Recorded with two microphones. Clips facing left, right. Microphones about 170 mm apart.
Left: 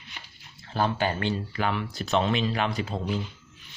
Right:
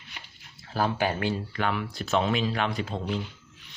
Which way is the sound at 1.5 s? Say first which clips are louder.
Even; centre (ahead or behind).